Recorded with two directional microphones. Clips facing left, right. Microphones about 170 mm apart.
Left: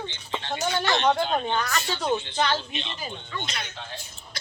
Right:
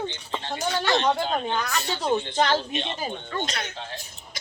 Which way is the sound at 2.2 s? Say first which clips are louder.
Right 3 dB; 45° right (ahead or behind).